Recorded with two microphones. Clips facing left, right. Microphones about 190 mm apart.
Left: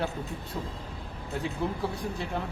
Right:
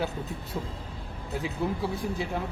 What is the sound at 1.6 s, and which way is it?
Speech, 5° right (ahead or behind).